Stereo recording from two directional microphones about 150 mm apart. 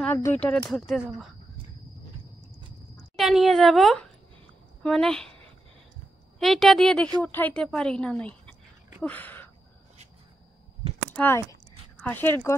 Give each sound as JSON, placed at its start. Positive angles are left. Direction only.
{"t": 0.1, "sound": "a woman's voice", "side_deg": 15}
{"t": 3.2, "sound": "a woman's voice", "side_deg": 0}
{"t": 6.4, "sound": "a woman's voice", "side_deg": 0}
{"t": 9.0, "sound": "a sound", "side_deg": 10}
{"t": 11.1, "sound": "speech", "side_deg": 15}